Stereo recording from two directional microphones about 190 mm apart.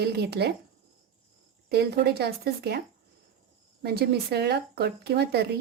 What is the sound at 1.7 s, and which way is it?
Speech, 60° right (ahead or behind).